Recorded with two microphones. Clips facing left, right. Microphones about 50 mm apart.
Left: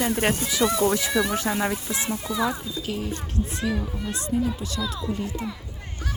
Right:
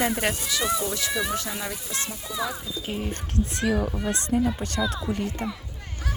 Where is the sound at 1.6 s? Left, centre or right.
Left.